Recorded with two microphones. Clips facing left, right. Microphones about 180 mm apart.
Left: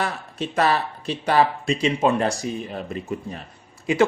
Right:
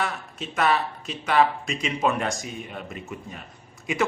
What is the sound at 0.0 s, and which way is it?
Speech, 35° left (ahead or behind).